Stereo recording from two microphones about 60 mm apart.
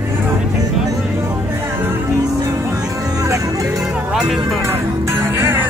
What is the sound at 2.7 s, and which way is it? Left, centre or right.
Music, right.